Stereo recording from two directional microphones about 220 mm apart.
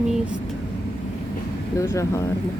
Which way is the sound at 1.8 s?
15° left (ahead or behind).